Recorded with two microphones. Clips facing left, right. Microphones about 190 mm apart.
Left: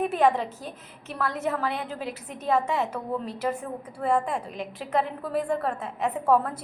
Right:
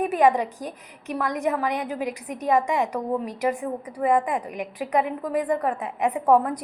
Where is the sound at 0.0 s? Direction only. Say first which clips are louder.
Right 3 dB; 10° right (ahead or behind).